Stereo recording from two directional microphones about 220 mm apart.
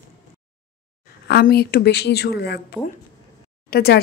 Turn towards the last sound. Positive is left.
turn(degrees=45)  # may be behind; listen again after turning